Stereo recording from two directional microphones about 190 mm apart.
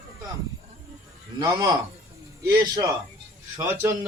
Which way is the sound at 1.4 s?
20° right (ahead or behind).